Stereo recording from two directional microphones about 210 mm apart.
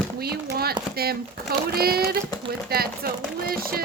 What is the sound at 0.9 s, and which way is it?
Speech, 45° right (ahead or behind).